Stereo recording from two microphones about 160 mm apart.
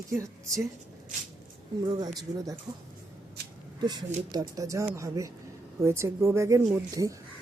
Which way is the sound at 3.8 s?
25° right (ahead or behind).